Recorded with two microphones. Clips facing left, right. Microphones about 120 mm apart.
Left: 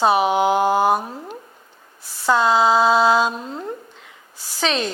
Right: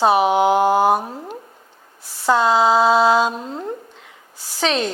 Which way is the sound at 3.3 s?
30° right (ahead or behind).